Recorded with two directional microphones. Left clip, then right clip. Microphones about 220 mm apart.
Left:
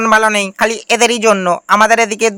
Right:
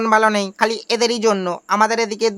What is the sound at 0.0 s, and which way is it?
Speech, 15° left (ahead or behind).